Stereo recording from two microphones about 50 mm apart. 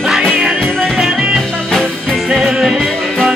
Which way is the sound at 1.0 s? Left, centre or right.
Centre.